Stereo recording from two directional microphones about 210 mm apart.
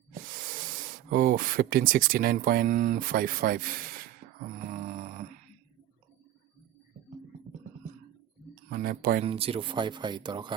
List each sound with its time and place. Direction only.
0.3 s hiss: 40° right (ahead or behind)
1.1 s speech: 45° right (ahead or behind)
4.7 s a sound: 35° right (ahead or behind)
8.7 s speech: 45° right (ahead or behind)
9.2 s speech: 25° right (ahead or behind)